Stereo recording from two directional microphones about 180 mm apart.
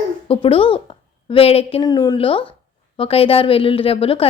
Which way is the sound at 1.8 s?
20° left (ahead or behind).